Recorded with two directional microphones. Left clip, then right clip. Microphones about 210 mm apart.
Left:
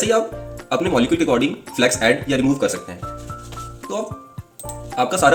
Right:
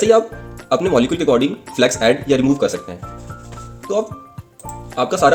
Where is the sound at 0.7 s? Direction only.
50° right (ahead or behind).